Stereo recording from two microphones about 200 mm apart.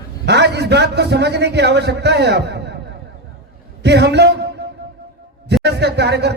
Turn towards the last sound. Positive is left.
turn(degrees=-55)  # may be behind; listen again after turning